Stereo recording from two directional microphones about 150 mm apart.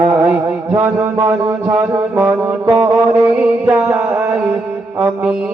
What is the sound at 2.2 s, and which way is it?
Mantra, 10° right (ahead or behind).